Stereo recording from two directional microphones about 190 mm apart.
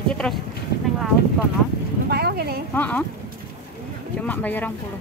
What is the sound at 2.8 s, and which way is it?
Speech, 5° left (ahead or behind).